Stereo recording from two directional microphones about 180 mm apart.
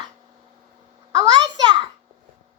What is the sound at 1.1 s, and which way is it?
Speech, 20° right (ahead or behind).